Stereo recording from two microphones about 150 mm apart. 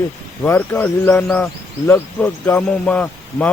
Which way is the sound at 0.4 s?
10° left (ahead or behind).